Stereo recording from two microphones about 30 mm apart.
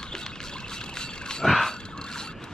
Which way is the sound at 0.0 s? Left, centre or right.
Left.